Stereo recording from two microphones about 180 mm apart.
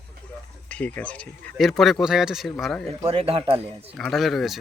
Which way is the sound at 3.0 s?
30° right (ahead or behind).